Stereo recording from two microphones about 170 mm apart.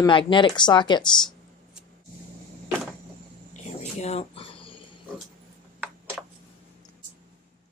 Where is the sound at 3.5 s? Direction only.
40° left (ahead or behind).